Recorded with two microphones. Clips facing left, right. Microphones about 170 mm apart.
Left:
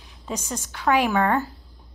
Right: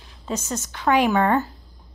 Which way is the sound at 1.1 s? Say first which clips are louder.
Right 2 dB; 5° right (ahead or behind).